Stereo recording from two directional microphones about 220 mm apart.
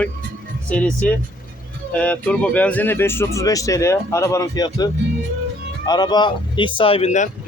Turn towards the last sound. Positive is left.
turn(degrees=30)  # may be behind; listen again after turning